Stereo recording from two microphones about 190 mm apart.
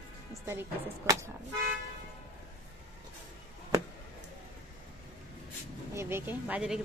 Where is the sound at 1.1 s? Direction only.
15° right (ahead or behind).